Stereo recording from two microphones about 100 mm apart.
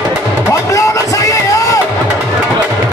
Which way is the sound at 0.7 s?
35° left (ahead or behind).